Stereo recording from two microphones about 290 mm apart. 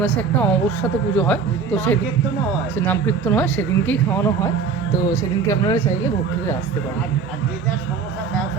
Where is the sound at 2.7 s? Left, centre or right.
Centre.